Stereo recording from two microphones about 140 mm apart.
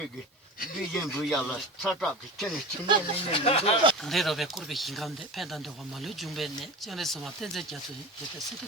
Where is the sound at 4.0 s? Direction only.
Centre (ahead or behind).